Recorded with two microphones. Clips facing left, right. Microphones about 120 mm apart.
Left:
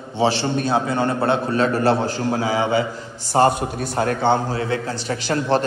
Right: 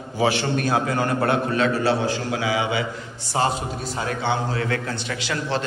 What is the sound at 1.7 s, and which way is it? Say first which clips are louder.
A man's voice: left 3 dB; 50° left (ahead or behind).